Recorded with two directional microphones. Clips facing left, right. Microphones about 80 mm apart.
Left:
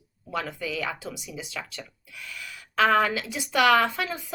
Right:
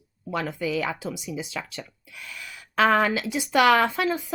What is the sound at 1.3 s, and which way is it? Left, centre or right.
Speech, right.